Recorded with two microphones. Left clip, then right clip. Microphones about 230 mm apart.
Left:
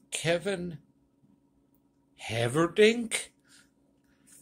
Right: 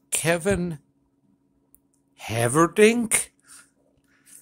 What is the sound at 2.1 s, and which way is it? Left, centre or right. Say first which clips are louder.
Speech: right 7 dB; right.